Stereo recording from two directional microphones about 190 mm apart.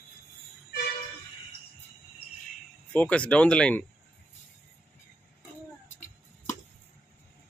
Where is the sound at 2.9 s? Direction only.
5° left (ahead or behind).